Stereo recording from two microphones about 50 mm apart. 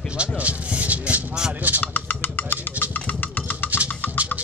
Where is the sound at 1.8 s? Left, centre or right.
Left.